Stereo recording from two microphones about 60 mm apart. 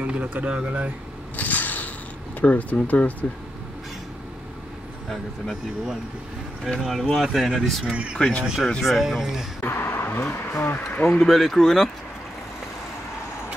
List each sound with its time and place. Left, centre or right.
0.0 s speech: right
1.3 s mechanisms: left
2.4 s speech: left
6.9 s speech: centre
7.9 s speech: centre
8.2 s speech: centre
8.8 s speech: centre
9.6 s a sound: left
10.3 s speech: left
11.2 s speech: centre